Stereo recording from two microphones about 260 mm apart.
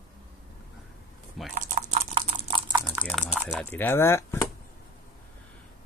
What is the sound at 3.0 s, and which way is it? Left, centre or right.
Typing, centre.